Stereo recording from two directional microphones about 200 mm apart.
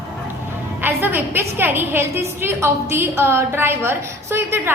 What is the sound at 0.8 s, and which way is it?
A woman's voice, 10° right (ahead or behind).